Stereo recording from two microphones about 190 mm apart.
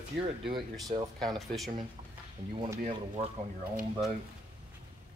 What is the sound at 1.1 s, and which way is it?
Speech, centre (ahead or behind).